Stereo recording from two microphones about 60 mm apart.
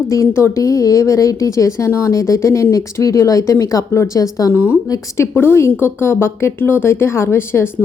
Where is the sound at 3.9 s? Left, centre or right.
Left.